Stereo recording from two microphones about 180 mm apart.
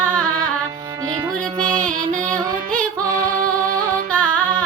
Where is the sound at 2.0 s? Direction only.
45° right (ahead or behind).